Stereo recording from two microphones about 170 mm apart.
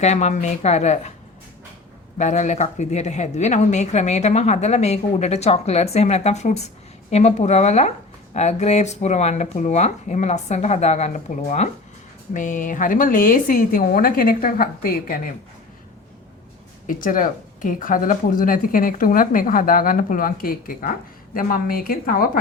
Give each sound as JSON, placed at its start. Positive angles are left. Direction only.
{"t": 0.0, "sound": "speech", "side_deg": 40}
{"t": 2.1, "sound": "a woman's voice", "side_deg": 45}
{"t": 16.8, "sound": "a woman's voice", "side_deg": 55}